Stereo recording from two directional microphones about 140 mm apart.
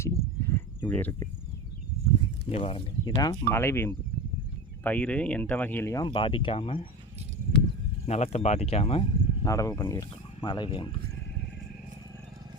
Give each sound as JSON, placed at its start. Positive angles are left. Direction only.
{"t": 0.0, "sound": "a sound", "side_deg": 20}
{"t": 2.5, "sound": "speech", "side_deg": 45}
{"t": 3.0, "sound": "speech", "side_deg": 25}
{"t": 8.0, "sound": "speech", "side_deg": 50}
{"t": 9.4, "sound": "speech", "side_deg": 25}